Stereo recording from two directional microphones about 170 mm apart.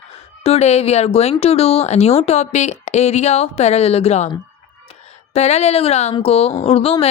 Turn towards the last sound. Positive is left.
turn(degrees=35)  # may be behind; listen again after turning